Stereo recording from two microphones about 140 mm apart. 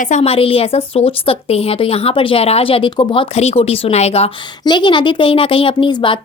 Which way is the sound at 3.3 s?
45° left (ahead or behind).